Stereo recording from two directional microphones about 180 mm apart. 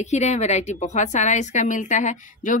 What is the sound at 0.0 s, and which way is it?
A woman's voice, 40° left (ahead or behind).